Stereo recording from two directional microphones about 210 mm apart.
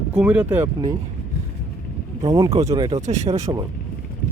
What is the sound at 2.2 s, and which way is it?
Speech, 15° right (ahead or behind).